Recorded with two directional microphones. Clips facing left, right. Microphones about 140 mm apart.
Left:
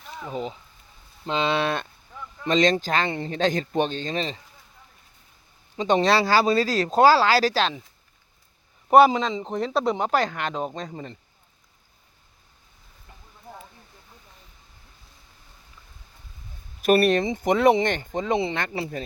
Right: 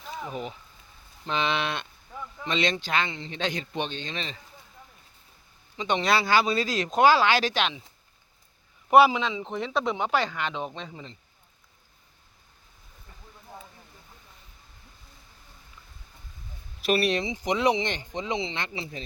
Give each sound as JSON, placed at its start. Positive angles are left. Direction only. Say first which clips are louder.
{"t": 0.3, "sound": "speech", "louder": "left 4 dB", "side_deg": 25}
{"t": 5.7, "sound": "speech", "louder": "left 5 dB", "side_deg": 40}
{"t": 8.9, "sound": "speech", "louder": "left 3 dB", "side_deg": 35}
{"t": 9.8, "sound": "speech", "louder": "left 3 dB", "side_deg": 0}
{"t": 10.9, "sound": "speech", "louder": "left 6 dB", "side_deg": 55}
{"t": 16.8, "sound": "speech", "louder": "left 6 dB", "side_deg": 50}